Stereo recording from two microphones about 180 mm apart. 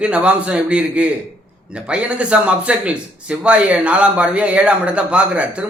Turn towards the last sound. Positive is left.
turn(degrees=-5)  # may be behind; listen again after turning